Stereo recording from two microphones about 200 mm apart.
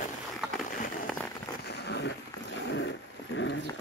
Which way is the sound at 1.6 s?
55° left (ahead or behind).